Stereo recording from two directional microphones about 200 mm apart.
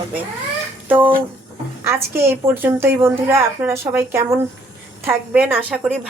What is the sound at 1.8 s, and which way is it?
A woman's voice, 15° right (ahead or behind).